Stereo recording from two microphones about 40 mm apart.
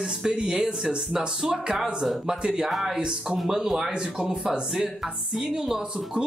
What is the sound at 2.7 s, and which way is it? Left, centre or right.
Speech, centre.